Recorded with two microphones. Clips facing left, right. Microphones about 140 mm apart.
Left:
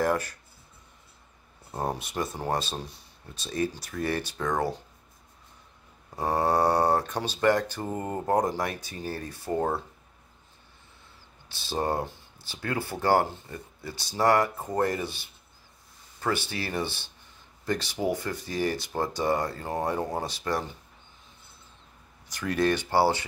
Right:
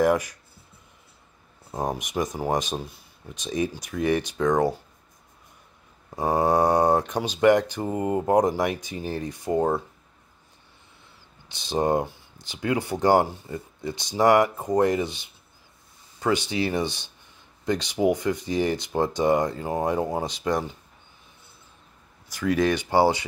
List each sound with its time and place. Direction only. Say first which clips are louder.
0.0 s speech: right 5 dB; 15° right (ahead or behind)
1.7 s speech: right 3 dB; 15° right (ahead or behind)
6.0 s speech: right 4 dB; 15° right (ahead or behind)
11.4 s speech: right 5 dB; 20° right (ahead or behind)
22.5 s speech: right 3 dB; 15° right (ahead or behind)